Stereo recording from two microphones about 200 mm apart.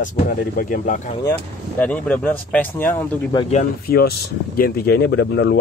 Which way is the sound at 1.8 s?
5° left (ahead or behind).